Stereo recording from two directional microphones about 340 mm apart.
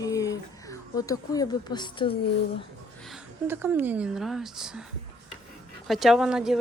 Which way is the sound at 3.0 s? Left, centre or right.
Centre.